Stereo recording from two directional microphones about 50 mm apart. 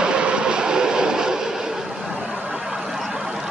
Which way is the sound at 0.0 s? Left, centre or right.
Centre.